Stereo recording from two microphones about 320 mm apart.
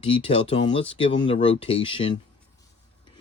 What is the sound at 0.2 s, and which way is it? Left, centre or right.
A man's voice, centre.